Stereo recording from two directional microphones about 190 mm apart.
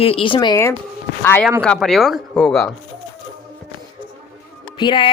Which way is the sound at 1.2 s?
10° left (ahead or behind).